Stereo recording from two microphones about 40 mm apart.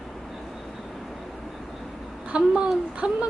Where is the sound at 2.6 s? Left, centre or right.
Right.